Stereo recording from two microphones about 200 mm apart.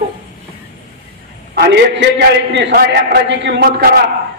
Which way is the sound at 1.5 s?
55° right (ahead or behind).